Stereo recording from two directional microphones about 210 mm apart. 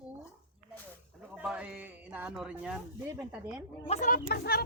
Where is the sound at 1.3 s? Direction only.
5° right (ahead or behind).